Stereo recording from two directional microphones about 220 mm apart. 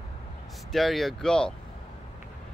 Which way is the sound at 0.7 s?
Centre (ahead or behind).